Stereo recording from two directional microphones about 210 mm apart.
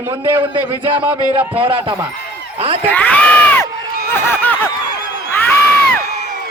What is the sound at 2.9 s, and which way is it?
Speech, 5° left (ahead or behind).